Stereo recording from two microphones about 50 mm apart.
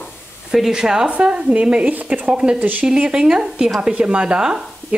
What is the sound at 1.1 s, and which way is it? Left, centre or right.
Speech, right.